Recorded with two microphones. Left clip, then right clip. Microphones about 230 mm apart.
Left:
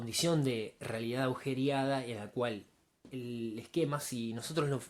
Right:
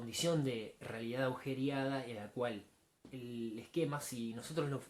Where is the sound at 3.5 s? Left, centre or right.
Left.